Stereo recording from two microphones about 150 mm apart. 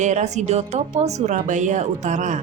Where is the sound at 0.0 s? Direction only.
50° right (ahead or behind).